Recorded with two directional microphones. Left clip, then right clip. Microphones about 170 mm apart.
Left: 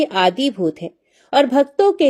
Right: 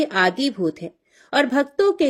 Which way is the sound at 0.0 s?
15° left (ahead or behind).